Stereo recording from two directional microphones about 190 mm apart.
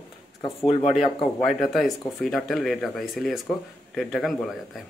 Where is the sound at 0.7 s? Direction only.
35° left (ahead or behind).